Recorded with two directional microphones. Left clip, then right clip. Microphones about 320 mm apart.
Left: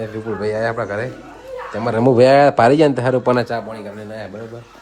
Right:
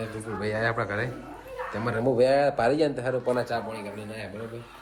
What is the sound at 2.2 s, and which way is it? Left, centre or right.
Speech, left.